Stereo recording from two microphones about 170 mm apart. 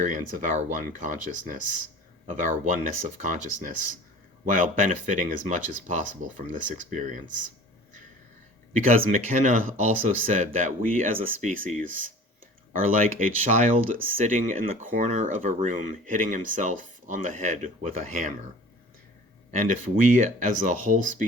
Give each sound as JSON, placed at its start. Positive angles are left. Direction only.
{"t": 0.0, "sound": "speech", "side_deg": -50}
{"t": 8.7, "sound": "speech", "side_deg": -50}
{"t": 19.5, "sound": "speech", "side_deg": -50}